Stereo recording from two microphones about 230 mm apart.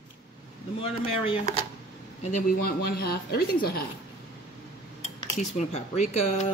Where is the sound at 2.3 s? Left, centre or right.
Left.